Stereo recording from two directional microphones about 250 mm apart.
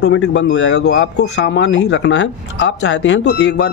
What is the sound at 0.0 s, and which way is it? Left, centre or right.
Speech, left.